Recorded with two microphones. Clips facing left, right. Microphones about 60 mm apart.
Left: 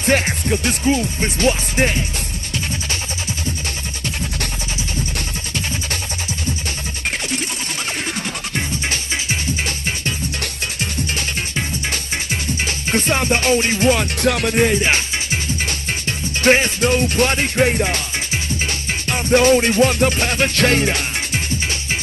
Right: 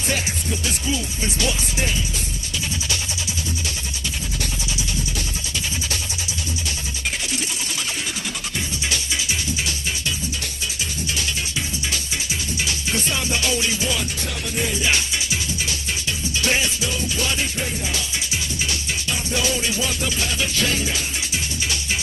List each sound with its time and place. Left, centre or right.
0.0 s music: left
8.5 s music: left
10.4 s music: left
18.3 s music: left